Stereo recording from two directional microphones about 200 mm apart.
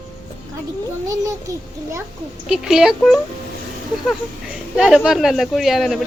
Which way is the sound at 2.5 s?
5° right (ahead or behind).